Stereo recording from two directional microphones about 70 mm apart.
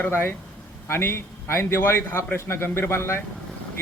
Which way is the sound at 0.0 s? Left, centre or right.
Left.